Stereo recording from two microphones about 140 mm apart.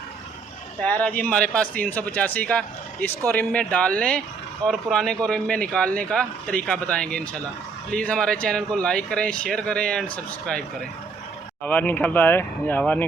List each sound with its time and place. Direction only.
0.8 s speech: 10° left (ahead or behind)
11.6 s speech: 10° left (ahead or behind)